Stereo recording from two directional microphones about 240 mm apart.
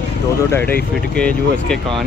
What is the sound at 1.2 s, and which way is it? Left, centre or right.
Speech, centre.